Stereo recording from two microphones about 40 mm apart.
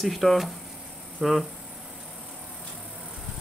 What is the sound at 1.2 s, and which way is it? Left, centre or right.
Speech, right.